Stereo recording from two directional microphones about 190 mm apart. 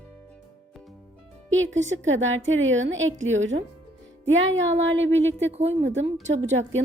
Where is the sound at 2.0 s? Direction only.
90° right.